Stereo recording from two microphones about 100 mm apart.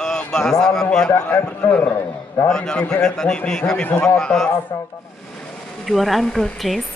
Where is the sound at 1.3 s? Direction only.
15° left (ahead or behind).